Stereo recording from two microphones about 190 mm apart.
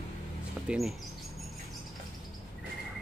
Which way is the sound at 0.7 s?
Centre (ahead or behind).